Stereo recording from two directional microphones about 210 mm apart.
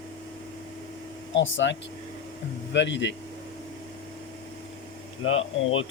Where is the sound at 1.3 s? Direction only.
60° left (ahead or behind).